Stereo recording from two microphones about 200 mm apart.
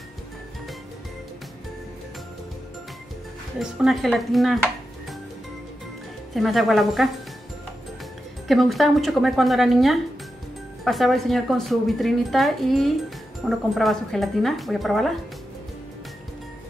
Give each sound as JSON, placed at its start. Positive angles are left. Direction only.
{"t": 3.5, "sound": "speech", "side_deg": 0}
{"t": 6.3, "sound": "speech", "side_deg": 0}
{"t": 8.5, "sound": "speech", "side_deg": 0}